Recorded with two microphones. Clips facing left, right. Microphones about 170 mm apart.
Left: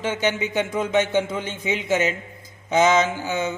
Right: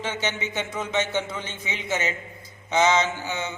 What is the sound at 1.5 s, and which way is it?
A man's voice, 50° left (ahead or behind).